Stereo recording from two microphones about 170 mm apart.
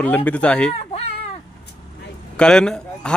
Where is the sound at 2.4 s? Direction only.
5° left (ahead or behind).